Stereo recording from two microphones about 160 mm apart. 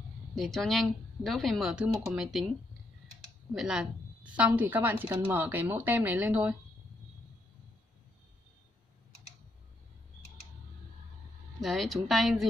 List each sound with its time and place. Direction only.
0.3 s speech: centre (ahead or behind)
3.5 s a woman's voice: 5° right (ahead or behind)
11.6 s speech: centre (ahead or behind)